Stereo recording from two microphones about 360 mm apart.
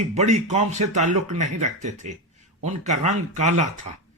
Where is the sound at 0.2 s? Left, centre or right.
Centre.